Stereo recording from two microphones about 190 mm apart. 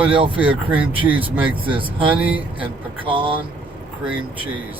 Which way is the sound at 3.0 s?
30° right (ahead or behind).